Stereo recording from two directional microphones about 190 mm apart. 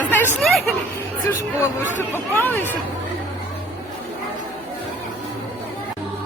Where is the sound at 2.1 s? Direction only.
10° left (ahead or behind).